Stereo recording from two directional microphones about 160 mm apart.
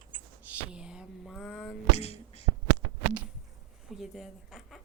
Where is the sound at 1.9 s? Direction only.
40° left (ahead or behind).